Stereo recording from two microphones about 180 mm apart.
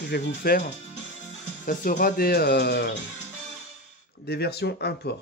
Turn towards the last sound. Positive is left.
turn(degrees=65)  # may be behind; listen again after turning